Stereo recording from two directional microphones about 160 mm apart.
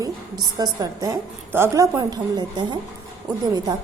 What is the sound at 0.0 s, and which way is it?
A woman's voice, 25° right (ahead or behind).